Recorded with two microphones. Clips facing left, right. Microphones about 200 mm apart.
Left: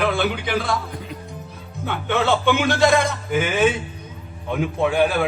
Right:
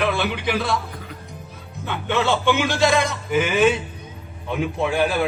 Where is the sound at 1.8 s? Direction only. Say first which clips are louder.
Left 1 dB; 55° left (ahead or behind).